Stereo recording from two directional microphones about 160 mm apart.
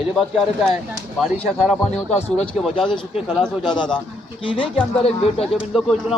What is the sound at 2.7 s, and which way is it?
Speech, 30° left (ahead or behind).